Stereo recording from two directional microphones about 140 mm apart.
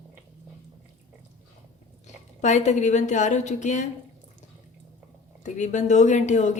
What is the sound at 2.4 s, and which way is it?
A woman's voice, 55° left (ahead or behind).